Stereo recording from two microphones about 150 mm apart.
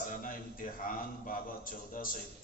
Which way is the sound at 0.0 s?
65° left (ahead or behind).